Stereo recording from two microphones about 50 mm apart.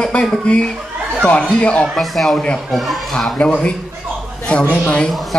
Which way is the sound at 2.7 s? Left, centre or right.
Centre.